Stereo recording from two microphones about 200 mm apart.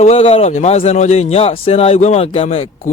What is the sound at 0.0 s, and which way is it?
A man's voice, 30° left (ahead or behind).